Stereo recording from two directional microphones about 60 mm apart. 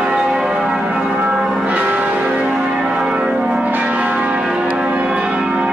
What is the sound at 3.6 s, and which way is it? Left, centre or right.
Church bell, right.